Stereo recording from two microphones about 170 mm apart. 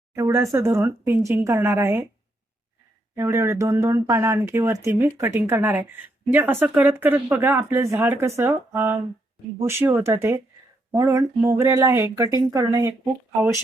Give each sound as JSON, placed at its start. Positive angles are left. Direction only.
{"t": 0.1, "sound": "a woman's voice", "side_deg": -15}
{"t": 3.2, "sound": "a woman's voice", "side_deg": -15}